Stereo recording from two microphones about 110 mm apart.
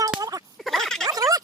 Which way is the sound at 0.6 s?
5° left (ahead or behind).